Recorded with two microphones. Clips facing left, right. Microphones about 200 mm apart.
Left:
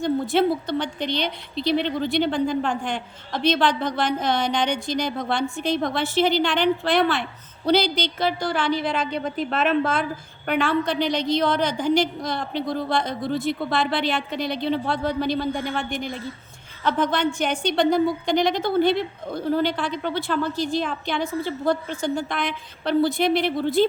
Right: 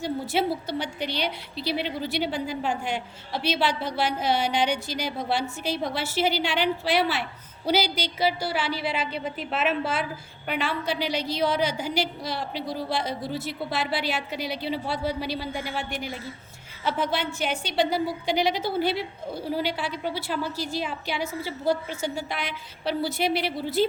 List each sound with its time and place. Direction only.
0.0 s speech: 5° right (ahead or behind)
10.4 s a woman's voice: 50° left (ahead or behind)
10.7 s speech: 5° right (ahead or behind)